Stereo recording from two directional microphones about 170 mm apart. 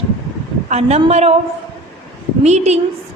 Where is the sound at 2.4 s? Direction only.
40° right (ahead or behind).